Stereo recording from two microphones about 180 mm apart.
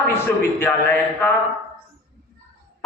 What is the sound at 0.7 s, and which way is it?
Speech, 10° left (ahead or behind).